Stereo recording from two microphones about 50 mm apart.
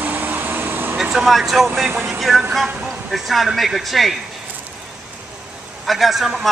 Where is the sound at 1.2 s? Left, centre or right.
Centre.